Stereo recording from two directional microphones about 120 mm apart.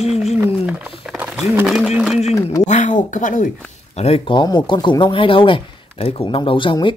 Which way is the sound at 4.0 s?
55° left (ahead or behind).